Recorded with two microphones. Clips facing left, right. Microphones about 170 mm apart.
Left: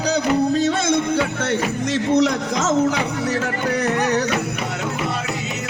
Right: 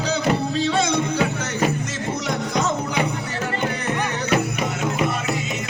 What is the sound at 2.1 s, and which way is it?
Music, 85° left.